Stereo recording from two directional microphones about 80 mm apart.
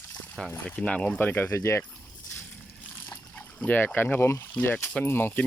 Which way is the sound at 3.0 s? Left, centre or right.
Left.